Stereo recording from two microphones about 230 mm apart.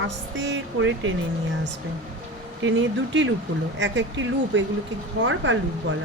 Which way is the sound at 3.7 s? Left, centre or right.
Right.